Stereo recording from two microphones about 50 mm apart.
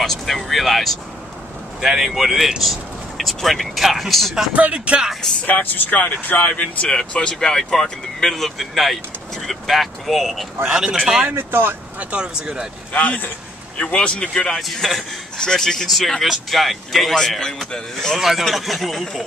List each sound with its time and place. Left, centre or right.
0.0 s a man's voice: centre
4.6 s speech: right
5.5 s speech: left
6.6 s speech: centre
10.6 s speech: centre
11.3 s speech: right
12.0 s speech: right
12.9 s speech: left
14.6 s speech: centre